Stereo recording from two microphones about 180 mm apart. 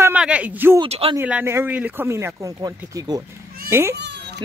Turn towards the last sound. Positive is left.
turn(degrees=-70)  # may be behind; listen again after turning